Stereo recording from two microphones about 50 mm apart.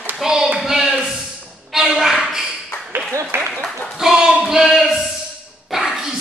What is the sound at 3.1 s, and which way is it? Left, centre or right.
Applause, right.